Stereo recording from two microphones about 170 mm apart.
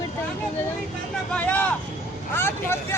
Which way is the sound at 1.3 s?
10° left (ahead or behind).